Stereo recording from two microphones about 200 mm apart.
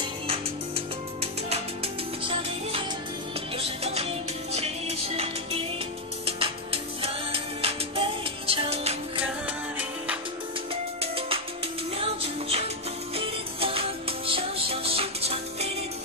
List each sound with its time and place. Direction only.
0.0 s music: 30° right (ahead or behind)
10.7 s music: 30° right (ahead or behind)